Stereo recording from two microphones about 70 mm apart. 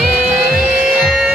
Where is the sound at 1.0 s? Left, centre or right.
Centre.